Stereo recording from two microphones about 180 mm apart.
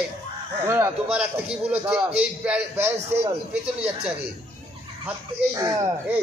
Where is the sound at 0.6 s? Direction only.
15° right (ahead or behind).